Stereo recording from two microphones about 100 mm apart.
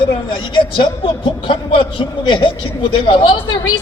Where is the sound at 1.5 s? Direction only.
55° left (ahead or behind).